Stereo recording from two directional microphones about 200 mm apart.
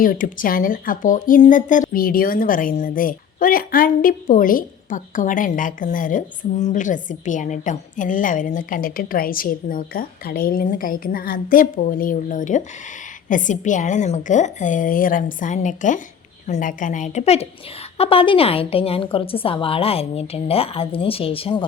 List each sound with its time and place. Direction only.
0.0 s a woman's voice: 45° left (ahead or behind)